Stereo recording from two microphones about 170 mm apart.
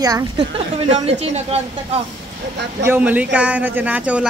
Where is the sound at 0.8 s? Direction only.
35° right (ahead or behind).